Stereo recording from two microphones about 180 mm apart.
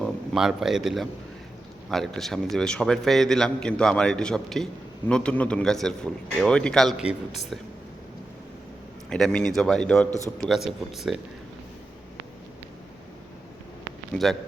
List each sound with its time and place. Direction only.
0.0 s a man's voice: 5° right (ahead or behind)
9.0 s a man's voice: 5° left (ahead or behind)
10.1 s speech: 20° right (ahead or behind)
10.7 s a man's voice: centre (ahead or behind)